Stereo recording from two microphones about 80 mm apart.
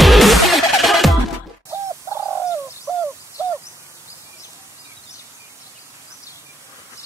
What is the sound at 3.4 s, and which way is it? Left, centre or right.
Crow, right.